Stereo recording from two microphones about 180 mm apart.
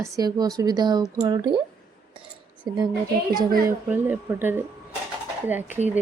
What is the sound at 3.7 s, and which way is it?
Speech, 10° right (ahead or behind).